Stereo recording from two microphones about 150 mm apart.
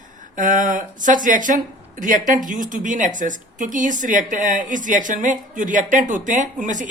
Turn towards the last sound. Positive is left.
turn(degrees=-60)  # may be behind; listen again after turning